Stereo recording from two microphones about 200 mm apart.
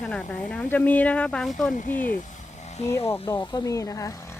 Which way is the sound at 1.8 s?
40° left (ahead or behind).